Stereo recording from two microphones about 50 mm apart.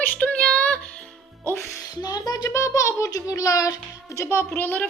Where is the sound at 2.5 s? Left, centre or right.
Left.